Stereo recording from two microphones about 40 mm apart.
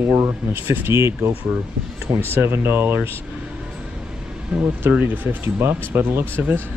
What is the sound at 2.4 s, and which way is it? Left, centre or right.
Speech, right.